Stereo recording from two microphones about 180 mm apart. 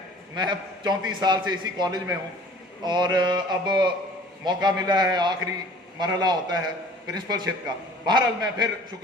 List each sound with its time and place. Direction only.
0.3 s a man's voice: 25° right (ahead or behind)